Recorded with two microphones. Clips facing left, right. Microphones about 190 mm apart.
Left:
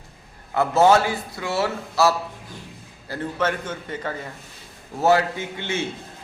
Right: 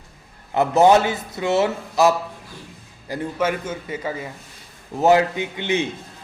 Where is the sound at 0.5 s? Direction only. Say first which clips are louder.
Right 2 dB; 20° right (ahead or behind).